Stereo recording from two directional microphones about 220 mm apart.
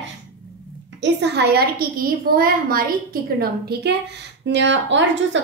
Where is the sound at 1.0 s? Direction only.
50° right (ahead or behind).